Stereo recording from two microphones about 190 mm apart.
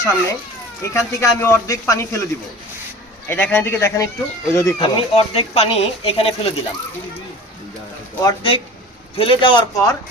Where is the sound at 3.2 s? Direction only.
10° left (ahead or behind); by 6.5 s 30° left (ahead or behind).